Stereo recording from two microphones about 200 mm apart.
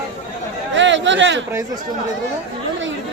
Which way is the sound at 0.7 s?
65° right (ahead or behind).